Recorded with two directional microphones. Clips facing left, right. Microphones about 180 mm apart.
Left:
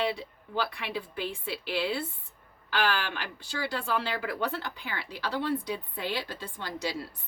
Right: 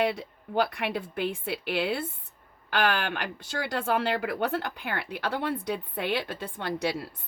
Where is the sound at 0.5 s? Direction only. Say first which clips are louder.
Right 5 dB; 50° right (ahead or behind).